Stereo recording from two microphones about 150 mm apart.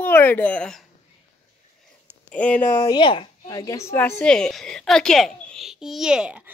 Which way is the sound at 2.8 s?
35° left (ahead or behind).